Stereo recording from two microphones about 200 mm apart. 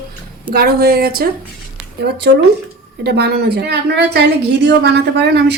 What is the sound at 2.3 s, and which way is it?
A woman's voice, 60° right (ahead or behind).